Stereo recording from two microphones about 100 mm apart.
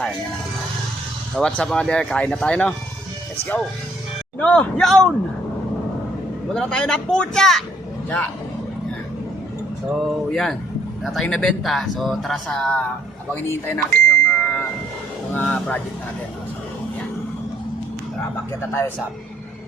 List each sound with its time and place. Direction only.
1.4 s speech: 5° left (ahead or behind)
4.4 s speech: 15° left (ahead or behind)
6.5 s speech: 5° left (ahead or behind)
9.9 s speech: centre (ahead or behind)
13.3 s a sound: 20° left (ahead or behind)
15.3 s speech: 15° left (ahead or behind)